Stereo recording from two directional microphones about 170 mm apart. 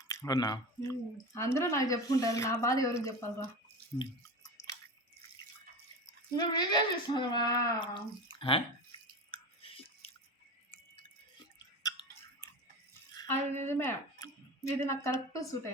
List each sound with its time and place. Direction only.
0.1 s speech: 20° left (ahead or behind)
6.3 s speech: 25° left (ahead or behind)
9.3 s chewing: 35° left (ahead or behind)
11.8 s chewing: 20° left (ahead or behind)
13.1 s speech: 15° left (ahead or behind)